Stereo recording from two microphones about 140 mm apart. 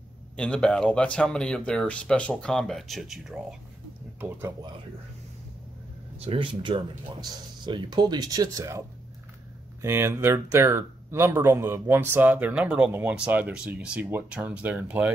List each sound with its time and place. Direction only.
0.4 s speech: 5° left (ahead or behind)
6.1 s speech: 40° right (ahead or behind); by 15.1 s 10° right (ahead or behind)